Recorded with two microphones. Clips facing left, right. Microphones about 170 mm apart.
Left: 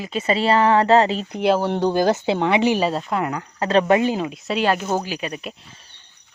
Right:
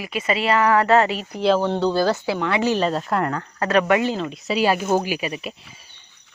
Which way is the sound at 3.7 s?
30° left (ahead or behind).